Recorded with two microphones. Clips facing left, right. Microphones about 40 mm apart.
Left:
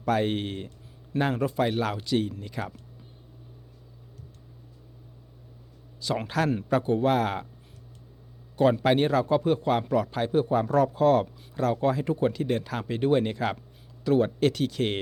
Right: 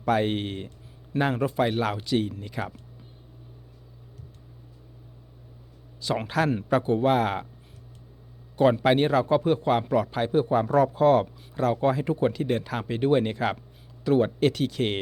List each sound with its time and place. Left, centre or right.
0.0 s a man's voice: centre
6.0 s a man's voice: centre
8.5 s a man's voice: centre